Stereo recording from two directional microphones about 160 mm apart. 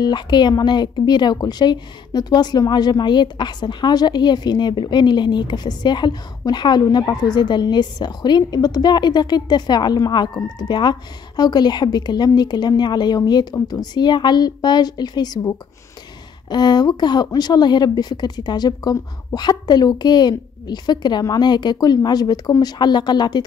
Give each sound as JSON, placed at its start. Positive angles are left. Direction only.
{"t": 0.0, "sound": "speech", "side_deg": 30}